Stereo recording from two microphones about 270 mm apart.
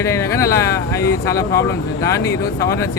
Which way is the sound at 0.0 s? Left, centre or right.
Centre.